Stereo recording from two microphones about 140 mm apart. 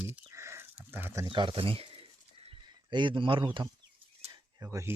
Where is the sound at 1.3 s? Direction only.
35° right (ahead or behind).